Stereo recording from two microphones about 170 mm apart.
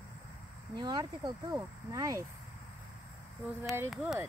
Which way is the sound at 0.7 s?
25° right (ahead or behind).